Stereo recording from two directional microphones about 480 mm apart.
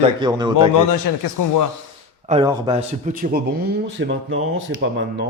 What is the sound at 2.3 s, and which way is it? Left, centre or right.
A man's voice, centre.